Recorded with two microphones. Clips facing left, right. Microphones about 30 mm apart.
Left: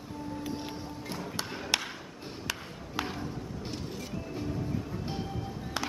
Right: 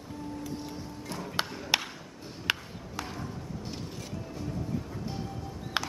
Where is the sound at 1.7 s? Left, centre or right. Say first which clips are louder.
Right 2 dB; centre.